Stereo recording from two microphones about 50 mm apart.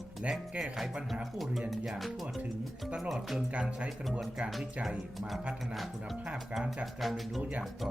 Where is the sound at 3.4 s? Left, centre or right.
Right.